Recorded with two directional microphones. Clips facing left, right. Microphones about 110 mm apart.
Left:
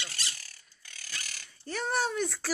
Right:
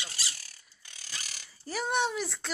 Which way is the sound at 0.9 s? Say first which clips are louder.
Left 1 dB; 20° right (ahead or behind).